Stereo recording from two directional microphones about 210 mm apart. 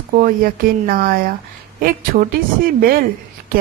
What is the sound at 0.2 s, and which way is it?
Speech, 45° right (ahead or behind).